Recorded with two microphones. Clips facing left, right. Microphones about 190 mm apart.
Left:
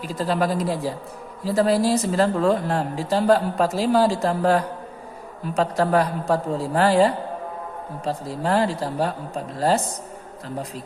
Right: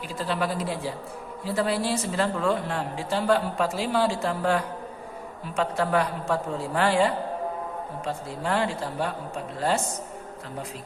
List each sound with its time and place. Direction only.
0.1 s a woman's voice: 40° left (ahead or behind)